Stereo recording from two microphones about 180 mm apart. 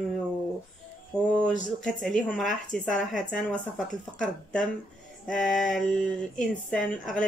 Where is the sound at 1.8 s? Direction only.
Centre (ahead or behind).